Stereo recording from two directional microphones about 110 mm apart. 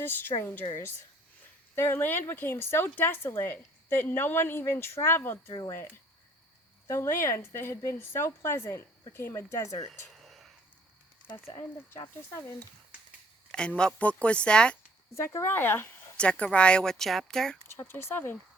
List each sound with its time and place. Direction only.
0.0 s speech: 20° left (ahead or behind)
1.7 s speech: 20° left (ahead or behind)
6.8 s speech: 25° left (ahead or behind)
10.2 s whispering: centre (ahead or behind)
12.3 s speech: 25° left (ahead or behind)
13.5 s a woman's voice: 10° left (ahead or behind)
15.1 s a woman's voice: 25° left (ahead or behind); by 17.6 s 5° left (ahead or behind)
17.7 s speech: 20° left (ahead or behind)